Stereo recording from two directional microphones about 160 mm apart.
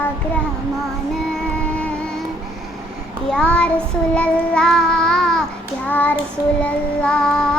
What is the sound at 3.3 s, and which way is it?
Child singing, 5° left (ahead or behind).